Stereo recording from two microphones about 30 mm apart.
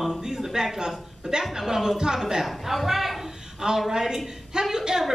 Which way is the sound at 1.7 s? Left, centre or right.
Centre.